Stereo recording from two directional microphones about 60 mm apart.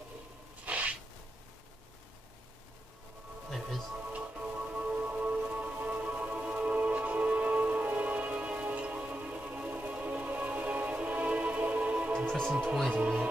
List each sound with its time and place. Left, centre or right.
0.7 s a sound: right
3.4 s speech: centre
4.1 s music: right